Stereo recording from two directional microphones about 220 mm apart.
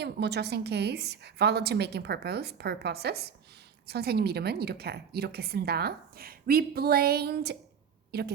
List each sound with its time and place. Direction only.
0.0 s a woman's voice: 50° right (ahead or behind)